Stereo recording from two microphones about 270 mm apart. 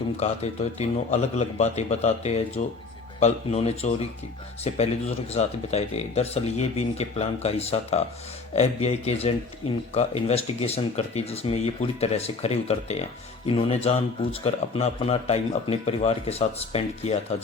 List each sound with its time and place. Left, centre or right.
0.2 s speech: left